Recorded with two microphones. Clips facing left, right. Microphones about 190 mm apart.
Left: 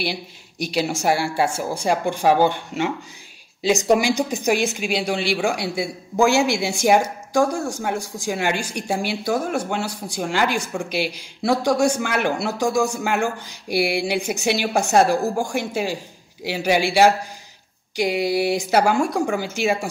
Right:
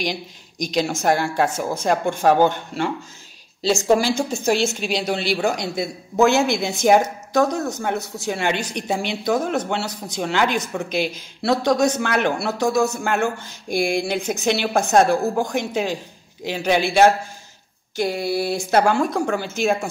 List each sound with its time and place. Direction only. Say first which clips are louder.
0.0 s speech: right 1 dB; 10° left (ahead or behind)
3.6 s speech: even; 15° left (ahead or behind)